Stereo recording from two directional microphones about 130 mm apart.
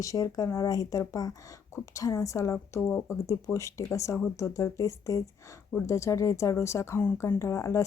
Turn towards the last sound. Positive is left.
turn(degrees=25)  # may be behind; listen again after turning